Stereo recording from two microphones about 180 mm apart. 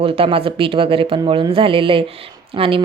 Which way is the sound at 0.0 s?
30° right (ahead or behind).